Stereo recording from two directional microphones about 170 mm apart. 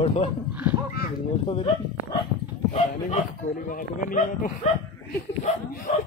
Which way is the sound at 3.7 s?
55° left (ahead or behind).